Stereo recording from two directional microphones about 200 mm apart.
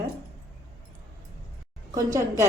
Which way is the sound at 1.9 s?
15° right (ahead or behind).